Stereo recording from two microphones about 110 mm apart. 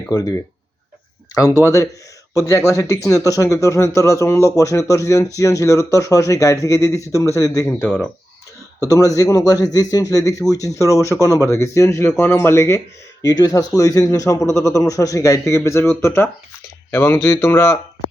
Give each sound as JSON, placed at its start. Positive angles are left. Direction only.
{"t": 0.1, "sound": "a man's voice", "side_deg": 35}
{"t": 1.6, "sound": "speech", "side_deg": 30}
{"t": 8.9, "sound": "a man's voice", "side_deg": 30}
{"t": 13.2, "sound": "a man's voice", "side_deg": 35}